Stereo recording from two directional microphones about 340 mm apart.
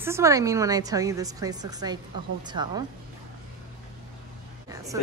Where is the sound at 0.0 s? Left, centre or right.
Centre.